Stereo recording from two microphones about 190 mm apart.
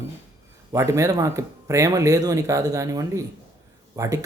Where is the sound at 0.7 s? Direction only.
15° right (ahead or behind).